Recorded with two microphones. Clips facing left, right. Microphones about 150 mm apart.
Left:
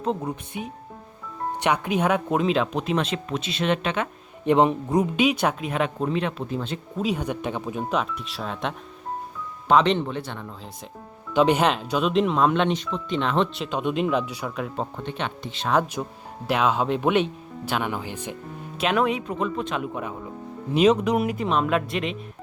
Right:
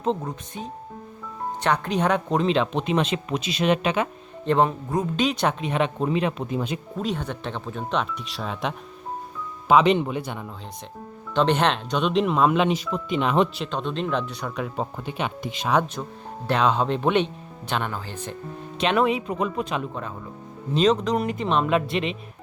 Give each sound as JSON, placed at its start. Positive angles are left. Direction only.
{"t": 0.0, "sound": "speech", "side_deg": 5}
{"t": 4.4, "sound": "speech", "side_deg": 15}
{"t": 7.0, "sound": "speech", "side_deg": 10}
{"t": 11.3, "sound": "speech", "side_deg": 10}
{"t": 13.6, "sound": "speech", "side_deg": 10}
{"t": 15.7, "sound": "speech", "side_deg": 5}
{"t": 18.8, "sound": "speech", "side_deg": 0}
{"t": 19.8, "sound": "speech", "side_deg": 15}